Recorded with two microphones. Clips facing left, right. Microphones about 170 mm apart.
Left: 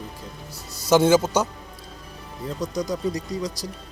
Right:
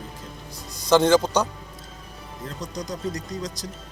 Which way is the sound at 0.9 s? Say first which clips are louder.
Even; 10° left (ahead or behind).